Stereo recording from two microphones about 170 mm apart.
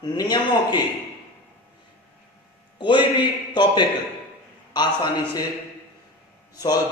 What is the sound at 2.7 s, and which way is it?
A man's voice, 30° left (ahead or behind).